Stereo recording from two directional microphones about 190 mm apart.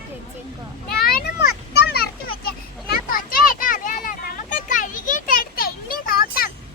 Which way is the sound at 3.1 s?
45° left (ahead or behind).